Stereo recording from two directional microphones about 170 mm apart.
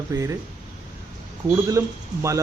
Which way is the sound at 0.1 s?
20° right (ahead or behind).